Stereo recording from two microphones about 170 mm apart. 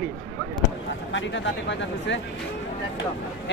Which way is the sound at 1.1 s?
90° left.